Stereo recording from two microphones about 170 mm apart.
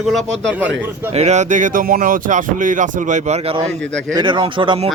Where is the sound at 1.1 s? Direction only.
40° right (ahead or behind).